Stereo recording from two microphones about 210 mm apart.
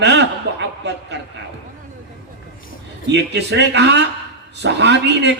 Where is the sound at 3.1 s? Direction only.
55° right (ahead or behind).